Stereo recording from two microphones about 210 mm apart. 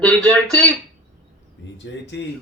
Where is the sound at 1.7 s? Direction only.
60° left (ahead or behind).